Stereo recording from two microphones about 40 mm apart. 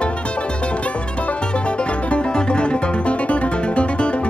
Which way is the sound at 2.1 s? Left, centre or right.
Left.